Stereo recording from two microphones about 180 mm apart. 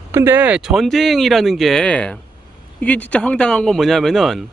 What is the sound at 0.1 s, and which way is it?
Speech, 10° right (ahead or behind).